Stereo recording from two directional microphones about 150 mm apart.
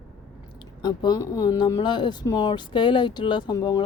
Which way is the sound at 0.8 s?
30° left (ahead or behind).